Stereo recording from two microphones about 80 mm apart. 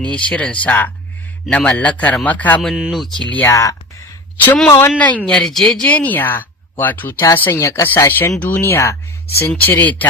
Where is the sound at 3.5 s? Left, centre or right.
Left.